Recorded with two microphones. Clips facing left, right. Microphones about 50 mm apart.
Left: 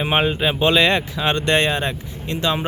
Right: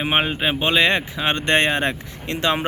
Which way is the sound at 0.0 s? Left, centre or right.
Centre.